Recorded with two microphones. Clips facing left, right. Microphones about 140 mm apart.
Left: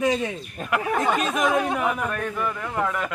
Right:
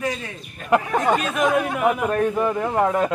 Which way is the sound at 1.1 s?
Centre (ahead or behind).